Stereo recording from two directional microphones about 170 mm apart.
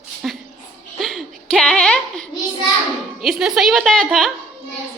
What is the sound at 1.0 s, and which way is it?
Speech, centre (ahead or behind).